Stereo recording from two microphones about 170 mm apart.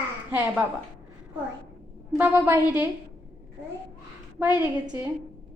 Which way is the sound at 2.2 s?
10° right (ahead or behind).